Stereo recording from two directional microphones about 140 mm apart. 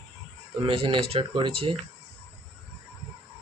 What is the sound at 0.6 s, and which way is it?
Speech, 45° right (ahead or behind).